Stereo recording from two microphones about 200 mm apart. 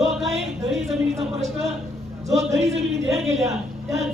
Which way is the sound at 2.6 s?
30° right (ahead or behind).